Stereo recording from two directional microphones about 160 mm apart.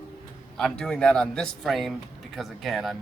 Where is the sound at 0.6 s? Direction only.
5° left (ahead or behind).